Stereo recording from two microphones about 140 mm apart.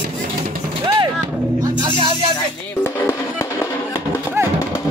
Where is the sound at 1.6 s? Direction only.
35° right (ahead or behind).